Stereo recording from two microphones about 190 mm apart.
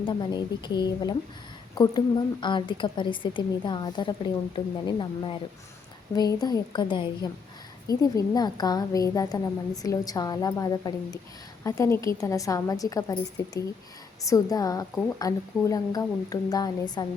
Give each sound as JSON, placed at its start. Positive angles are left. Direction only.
{"t": 0.0, "sound": "a woman's voice", "side_deg": 25}